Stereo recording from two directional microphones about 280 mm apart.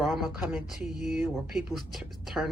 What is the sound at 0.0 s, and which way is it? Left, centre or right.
Speech, centre.